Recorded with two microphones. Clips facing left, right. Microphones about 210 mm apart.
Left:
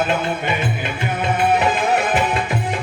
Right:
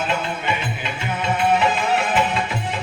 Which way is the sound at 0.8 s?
50° left (ahead or behind).